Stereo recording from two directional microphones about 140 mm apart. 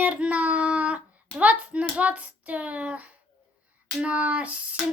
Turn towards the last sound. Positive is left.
turn(degrees=-10)  # may be behind; listen again after turning